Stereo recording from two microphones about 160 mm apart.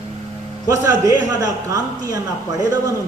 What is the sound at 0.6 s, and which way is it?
A man's voice, 20° right (ahead or behind).